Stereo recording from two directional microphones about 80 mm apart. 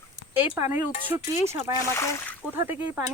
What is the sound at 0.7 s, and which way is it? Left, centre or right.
Speech, right.